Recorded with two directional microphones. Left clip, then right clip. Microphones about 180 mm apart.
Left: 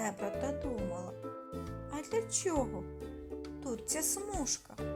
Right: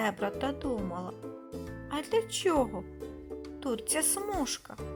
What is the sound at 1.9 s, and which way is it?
A woman's voice, 20° right (ahead or behind).